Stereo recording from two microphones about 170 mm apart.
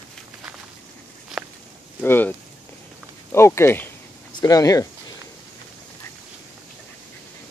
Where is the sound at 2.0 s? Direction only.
10° left (ahead or behind).